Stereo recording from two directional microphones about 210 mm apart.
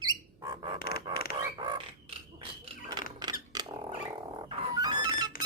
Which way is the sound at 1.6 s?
20° right (ahead or behind).